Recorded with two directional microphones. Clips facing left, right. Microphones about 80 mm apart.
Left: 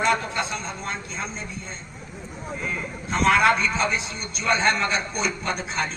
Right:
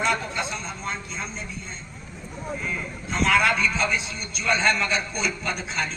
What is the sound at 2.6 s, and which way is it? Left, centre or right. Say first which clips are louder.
A man's voice: left 1 dB; left.